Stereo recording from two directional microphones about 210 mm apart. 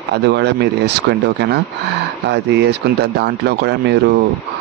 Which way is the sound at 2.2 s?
55° right (ahead or behind).